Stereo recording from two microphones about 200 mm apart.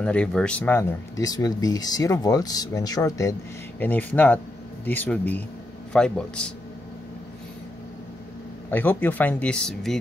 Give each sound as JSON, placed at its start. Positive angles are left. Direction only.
{"t": 0.0, "sound": "a man's voice", "side_deg": 5}
{"t": 8.6, "sound": "speech", "side_deg": 10}